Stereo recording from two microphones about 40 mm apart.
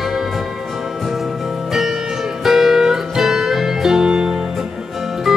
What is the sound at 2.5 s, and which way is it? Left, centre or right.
Music, centre.